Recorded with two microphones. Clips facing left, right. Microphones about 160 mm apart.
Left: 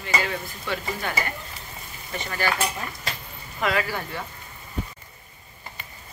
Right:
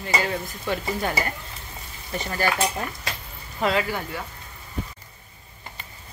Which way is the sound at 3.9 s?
15° right (ahead or behind).